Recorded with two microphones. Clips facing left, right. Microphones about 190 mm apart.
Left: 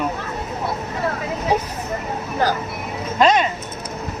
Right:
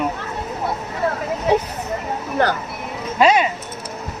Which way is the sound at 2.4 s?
65° right (ahead or behind).